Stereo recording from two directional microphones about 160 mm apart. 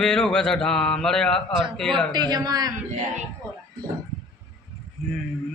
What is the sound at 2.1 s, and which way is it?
Speech, 25° right (ahead or behind).